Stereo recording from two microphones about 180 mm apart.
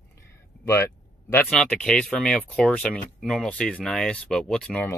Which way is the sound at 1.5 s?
5° left (ahead or behind).